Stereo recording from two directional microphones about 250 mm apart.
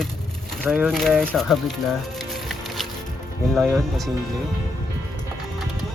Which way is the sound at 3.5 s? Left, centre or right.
Centre.